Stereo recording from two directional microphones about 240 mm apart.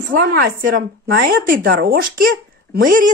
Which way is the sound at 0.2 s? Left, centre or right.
Right.